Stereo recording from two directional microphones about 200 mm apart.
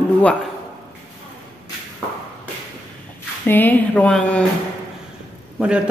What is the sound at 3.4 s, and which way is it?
Speech, 10° left (ahead or behind).